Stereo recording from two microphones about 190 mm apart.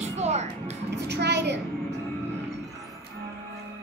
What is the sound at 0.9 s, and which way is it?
Speech, 65° right (ahead or behind).